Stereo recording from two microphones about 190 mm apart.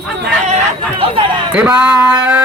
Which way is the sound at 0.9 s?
30° right (ahead or behind).